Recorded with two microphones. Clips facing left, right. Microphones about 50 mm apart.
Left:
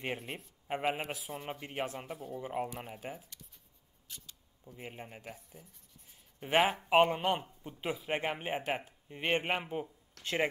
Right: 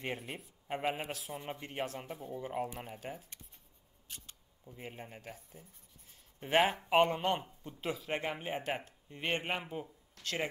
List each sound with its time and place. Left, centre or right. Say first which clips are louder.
0.0 s speech: left 1 dB; centre
4.7 s speech: left 1 dB; centre
8.6 s speech: left 2 dB; centre
9.1 s speech: left 3 dB; centre